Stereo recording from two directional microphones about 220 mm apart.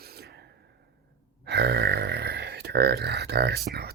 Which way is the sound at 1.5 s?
50° right (ahead or behind).